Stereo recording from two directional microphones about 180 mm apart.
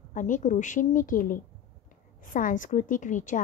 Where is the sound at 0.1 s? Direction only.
45° left (ahead or behind).